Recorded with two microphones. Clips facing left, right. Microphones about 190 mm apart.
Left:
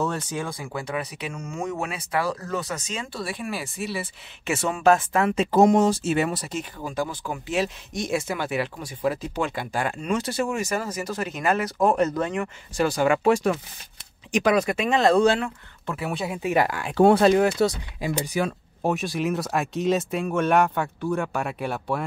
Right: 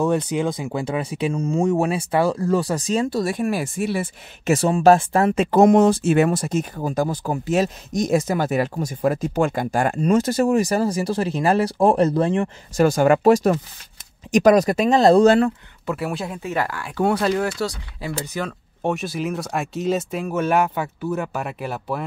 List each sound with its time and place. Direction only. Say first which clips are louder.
0.0 s speech: right 7 dB; 15° right (ahead or behind); by 5.3 s 35° right (ahead or behind)
5.3 s speech: right 3 dB; 55° right (ahead or behind); by 12.4 s 30° right (ahead or behind)
12.7 s speech: right 5 dB; 45° right (ahead or behind)
15.9 s speech: right 3 dB; centre (ahead or behind)
16.4 s speech: left 4 dB; 15° left (ahead or behind); by 22.0 s centre (ahead or behind)